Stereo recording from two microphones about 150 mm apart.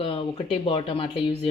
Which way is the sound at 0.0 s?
35° left (ahead or behind).